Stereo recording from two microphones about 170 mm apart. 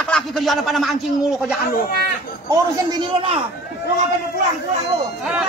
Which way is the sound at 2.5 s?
25° right (ahead or behind).